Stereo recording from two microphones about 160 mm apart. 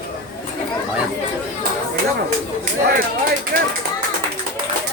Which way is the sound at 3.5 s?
70° right (ahead or behind).